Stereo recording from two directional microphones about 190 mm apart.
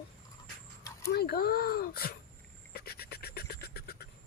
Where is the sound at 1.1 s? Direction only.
55° left (ahead or behind).